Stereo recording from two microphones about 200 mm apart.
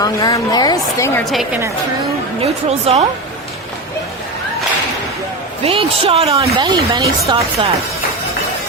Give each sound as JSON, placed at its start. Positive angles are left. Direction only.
{"t": 0.0, "sound": "a woman's voice", "side_deg": 20}
{"t": 1.2, "sound": "a woman's voice", "side_deg": 0}
{"t": 2.4, "sound": "speech", "side_deg": -30}
{"t": 5.6, "sound": "speech", "side_deg": -30}